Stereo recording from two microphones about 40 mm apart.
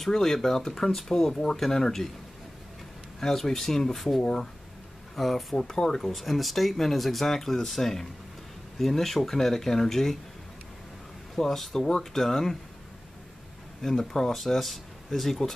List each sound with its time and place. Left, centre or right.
0.1 s speech: centre
3.2 s speech: centre
6.0 s speech: centre
11.3 s speech: centre
13.8 s speech: centre